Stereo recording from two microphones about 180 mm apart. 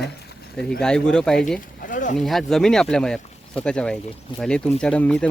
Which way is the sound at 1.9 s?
45° left (ahead or behind).